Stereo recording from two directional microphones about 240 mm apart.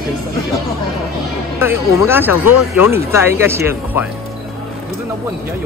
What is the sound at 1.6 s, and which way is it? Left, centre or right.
Speech, centre.